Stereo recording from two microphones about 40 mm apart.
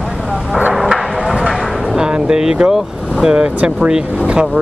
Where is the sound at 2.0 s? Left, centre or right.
Right.